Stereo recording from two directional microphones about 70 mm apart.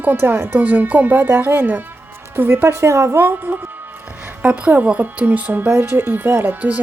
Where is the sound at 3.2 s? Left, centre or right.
Right.